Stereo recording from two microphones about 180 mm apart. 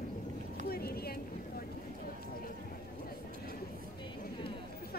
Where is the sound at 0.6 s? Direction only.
60° left (ahead or behind).